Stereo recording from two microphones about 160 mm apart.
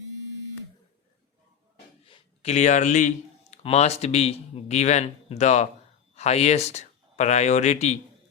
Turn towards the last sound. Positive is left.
turn(degrees=45)  # may be behind; listen again after turning